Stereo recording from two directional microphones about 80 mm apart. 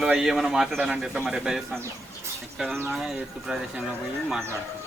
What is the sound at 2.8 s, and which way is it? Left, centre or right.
Speech, centre.